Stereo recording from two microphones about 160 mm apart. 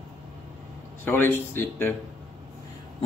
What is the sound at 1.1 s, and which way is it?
Speech, 15° left (ahead or behind).